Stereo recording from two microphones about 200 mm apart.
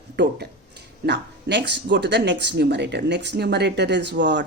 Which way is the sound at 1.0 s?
60° right (ahead or behind).